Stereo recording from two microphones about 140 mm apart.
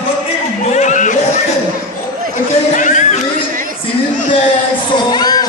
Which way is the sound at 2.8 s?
60° left (ahead or behind).